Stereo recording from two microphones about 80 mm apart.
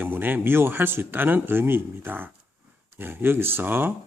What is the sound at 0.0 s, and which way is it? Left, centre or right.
Speech, right.